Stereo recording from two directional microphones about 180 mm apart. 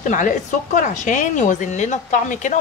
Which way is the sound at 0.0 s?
45° left (ahead or behind).